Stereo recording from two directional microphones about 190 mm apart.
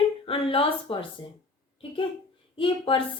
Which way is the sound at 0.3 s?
30° left (ahead or behind).